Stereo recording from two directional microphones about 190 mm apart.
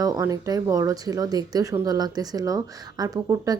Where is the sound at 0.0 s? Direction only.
15° right (ahead or behind).